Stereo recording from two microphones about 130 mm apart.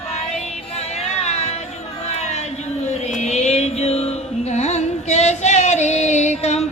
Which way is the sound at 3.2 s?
60° left (ahead or behind).